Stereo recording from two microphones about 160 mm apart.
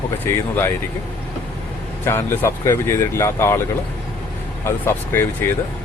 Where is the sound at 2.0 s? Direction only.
15° left (ahead or behind).